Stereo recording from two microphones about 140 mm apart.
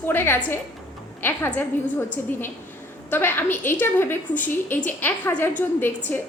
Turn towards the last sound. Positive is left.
turn(degrees=15)  # may be behind; listen again after turning